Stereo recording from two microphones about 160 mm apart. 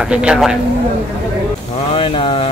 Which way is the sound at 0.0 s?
5° right (ahead or behind).